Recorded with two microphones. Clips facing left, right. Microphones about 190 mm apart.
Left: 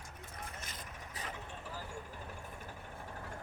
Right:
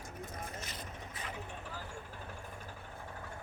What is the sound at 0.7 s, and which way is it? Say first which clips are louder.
Vehicle: right 3 dB; 40° left (ahead or behind).